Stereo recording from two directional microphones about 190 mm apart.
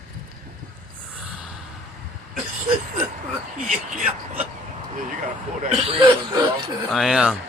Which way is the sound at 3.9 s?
40° right (ahead or behind).